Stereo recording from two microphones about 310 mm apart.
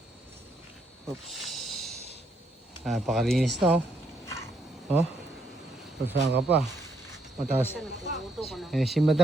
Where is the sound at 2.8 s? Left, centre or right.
Centre.